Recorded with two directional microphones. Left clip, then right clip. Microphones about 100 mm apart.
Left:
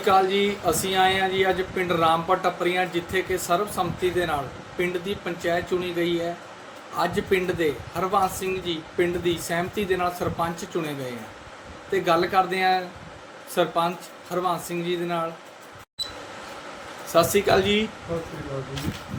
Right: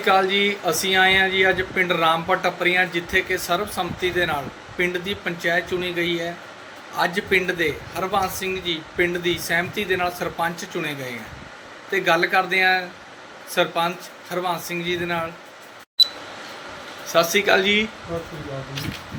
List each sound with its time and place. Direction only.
0.0 s speech: 25° left (ahead or behind)
17.1 s speech: 30° left (ahead or behind)